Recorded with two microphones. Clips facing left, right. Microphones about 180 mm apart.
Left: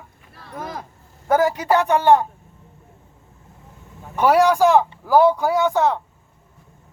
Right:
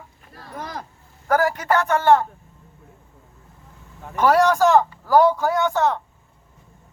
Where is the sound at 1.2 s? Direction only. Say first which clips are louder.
Left 2 dB; 20° left (ahead or behind).